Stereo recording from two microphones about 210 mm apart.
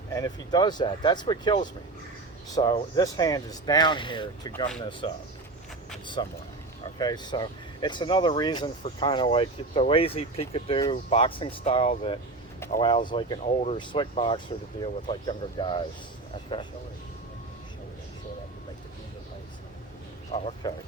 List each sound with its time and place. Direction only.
0.1 s speech: 15° left (ahead or behind)
6.2 s speech: 20° left (ahead or behind)
20.3 s speech: 30° left (ahead or behind)